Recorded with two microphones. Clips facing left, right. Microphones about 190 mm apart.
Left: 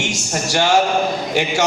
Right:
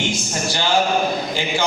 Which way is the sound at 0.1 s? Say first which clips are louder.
Left 2 dB; 80° left.